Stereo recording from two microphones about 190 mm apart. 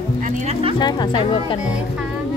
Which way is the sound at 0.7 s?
25° left (ahead or behind).